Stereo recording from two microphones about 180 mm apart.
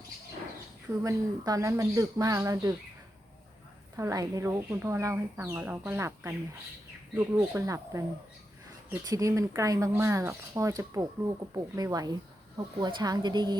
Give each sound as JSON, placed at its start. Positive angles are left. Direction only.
{"t": 1.0, "sound": "speech", "side_deg": -20}
{"t": 3.9, "sound": "speech", "side_deg": -20}